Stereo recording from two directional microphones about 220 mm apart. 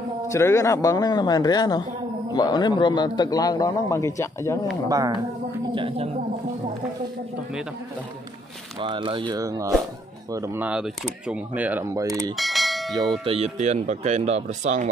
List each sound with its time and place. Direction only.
0.3 s a man's voice: 15° left (ahead or behind)
4.8 s speech: 15° right (ahead or behind)
8.7 s speech: 20° right (ahead or behind)
12.4 s bell: centre (ahead or behind)
13.2 s speech: 25° right (ahead or behind)